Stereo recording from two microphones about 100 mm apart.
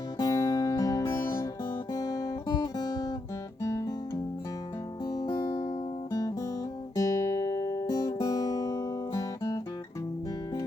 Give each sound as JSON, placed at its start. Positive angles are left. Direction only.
{"t": 0.2, "sound": "music", "side_deg": 40}
{"t": 1.0, "sound": "music", "side_deg": 25}
{"t": 1.9, "sound": "guitar", "side_deg": 35}
{"t": 3.6, "sound": "guitar", "side_deg": 30}
{"t": 5.0, "sound": "music", "side_deg": 35}
{"t": 6.1, "sound": "guitar", "side_deg": 35}